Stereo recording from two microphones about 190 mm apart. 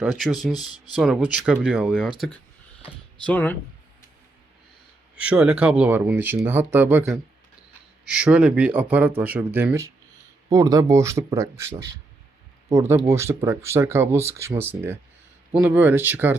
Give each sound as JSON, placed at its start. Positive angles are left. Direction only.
{"t": 0.0, "sound": "speech", "side_deg": -5}
{"t": 3.2, "sound": "speech", "side_deg": 10}
{"t": 5.1, "sound": "speech", "side_deg": -5}